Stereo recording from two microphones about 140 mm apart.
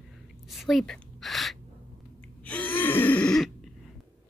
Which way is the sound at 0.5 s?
Centre (ahead or behind).